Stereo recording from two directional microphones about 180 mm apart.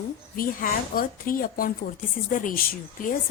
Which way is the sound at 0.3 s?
50° left (ahead or behind).